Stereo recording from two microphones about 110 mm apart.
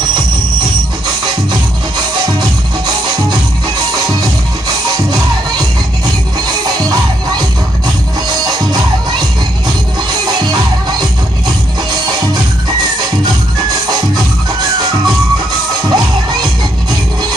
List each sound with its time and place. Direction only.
1.2 s music: 40° right (ahead or behind)
4.8 s music: 40° right (ahead or behind)
13.8 s music: 40° right (ahead or behind)
15.8 s music: 40° right (ahead or behind)